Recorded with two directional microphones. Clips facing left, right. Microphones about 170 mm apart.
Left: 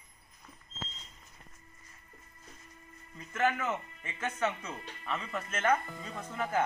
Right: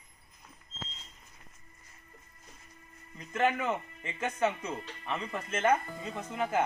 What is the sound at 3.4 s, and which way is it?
Speech, 30° right (ahead or behind).